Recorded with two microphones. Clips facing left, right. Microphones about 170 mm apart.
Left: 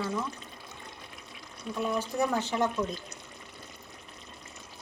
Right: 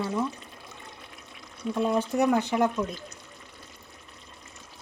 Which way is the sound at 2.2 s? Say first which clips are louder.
Right 5 dB; 15° right (ahead or behind).